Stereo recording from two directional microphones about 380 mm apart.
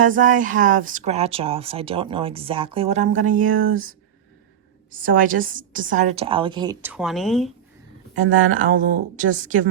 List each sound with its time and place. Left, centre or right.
0.0 s speech: right; by 7.5 s centre
8.5 s speech: right